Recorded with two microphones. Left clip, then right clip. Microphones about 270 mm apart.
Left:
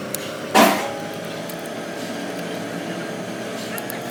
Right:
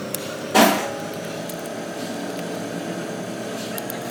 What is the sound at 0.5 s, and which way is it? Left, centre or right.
Vehicle, centre.